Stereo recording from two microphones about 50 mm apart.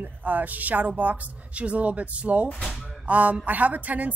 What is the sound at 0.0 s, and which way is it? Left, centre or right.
A woman's voice, right.